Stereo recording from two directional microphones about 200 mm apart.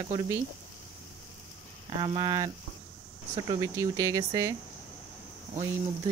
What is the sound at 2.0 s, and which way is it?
Speech, 20° right (ahead or behind).